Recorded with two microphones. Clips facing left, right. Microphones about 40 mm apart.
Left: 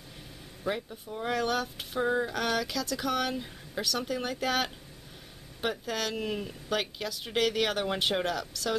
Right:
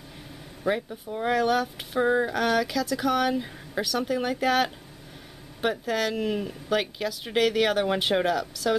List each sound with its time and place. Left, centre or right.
0.7 s speech: centre
1.3 s speech: centre
2.0 s a sound: centre
2.3 s speech: centre